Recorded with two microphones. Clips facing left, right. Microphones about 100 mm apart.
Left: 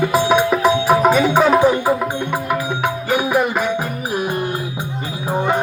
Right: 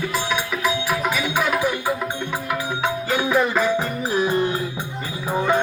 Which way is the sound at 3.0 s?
15° left (ahead or behind).